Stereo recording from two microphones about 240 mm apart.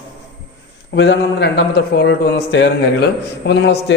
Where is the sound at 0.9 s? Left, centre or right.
Left.